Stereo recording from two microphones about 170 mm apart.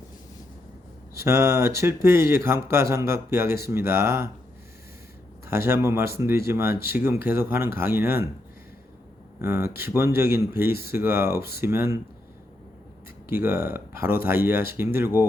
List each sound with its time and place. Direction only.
1.1 s speech: 15° right (ahead or behind)
5.5 s speech: 15° right (ahead or behind)
9.4 s speech: 15° right (ahead or behind)
13.2 s speech: 15° right (ahead or behind)